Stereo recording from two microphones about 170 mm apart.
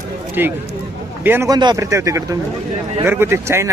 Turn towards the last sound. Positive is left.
turn(degrees=-15)  # may be behind; listen again after turning